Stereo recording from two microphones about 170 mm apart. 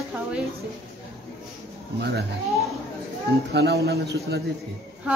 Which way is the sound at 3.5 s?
75° right (ahead or behind).